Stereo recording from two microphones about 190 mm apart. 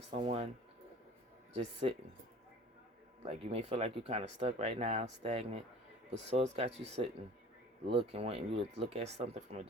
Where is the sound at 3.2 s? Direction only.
35° right (ahead or behind).